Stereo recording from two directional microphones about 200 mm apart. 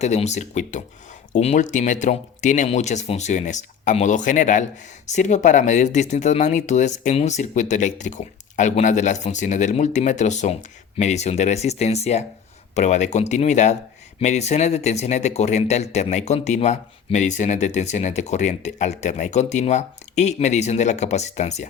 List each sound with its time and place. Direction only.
0.0 s speech: 35° left (ahead or behind)